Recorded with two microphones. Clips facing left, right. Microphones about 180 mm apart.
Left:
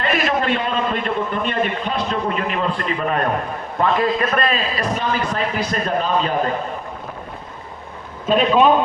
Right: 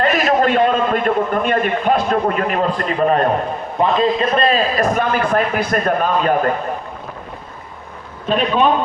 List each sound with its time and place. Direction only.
0.0 s a man's voice: 45° right (ahead or behind)
3.8 s a man's voice: 20° right (ahead or behind)
4.4 s a man's voice: 45° right (ahead or behind)
8.3 s a man's voice: centre (ahead or behind)